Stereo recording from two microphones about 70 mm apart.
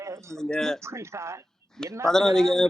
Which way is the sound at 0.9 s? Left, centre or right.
Right.